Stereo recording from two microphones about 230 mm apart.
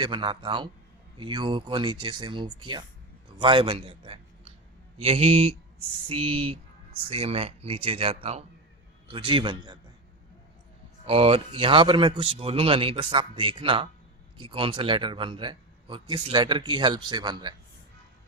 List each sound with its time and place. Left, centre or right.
0.0 s speech: right
11.0 s speech: right